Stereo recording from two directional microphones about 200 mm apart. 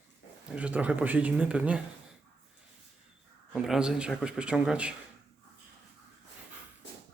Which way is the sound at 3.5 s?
5° right (ahead or behind).